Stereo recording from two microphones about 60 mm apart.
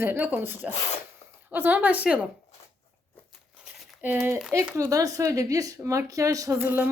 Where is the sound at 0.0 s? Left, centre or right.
Right.